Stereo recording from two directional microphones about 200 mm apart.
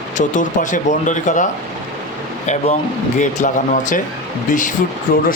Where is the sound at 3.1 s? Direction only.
40° left (ahead or behind).